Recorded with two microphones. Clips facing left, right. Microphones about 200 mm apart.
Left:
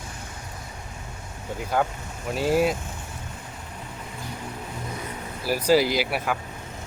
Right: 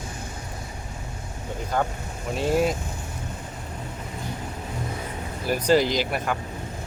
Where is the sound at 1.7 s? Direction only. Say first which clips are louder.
Left 1 dB; 5° left (ahead or behind).